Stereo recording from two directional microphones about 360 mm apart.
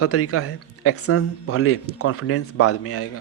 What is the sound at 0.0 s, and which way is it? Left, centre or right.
Speech, left.